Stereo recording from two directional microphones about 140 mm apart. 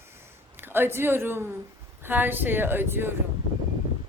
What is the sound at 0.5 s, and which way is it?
A woman's voice, 15° right (ahead or behind).